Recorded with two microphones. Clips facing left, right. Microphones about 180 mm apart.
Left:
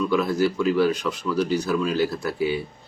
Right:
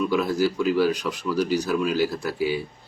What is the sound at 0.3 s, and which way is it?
Speech, 15° right (ahead or behind).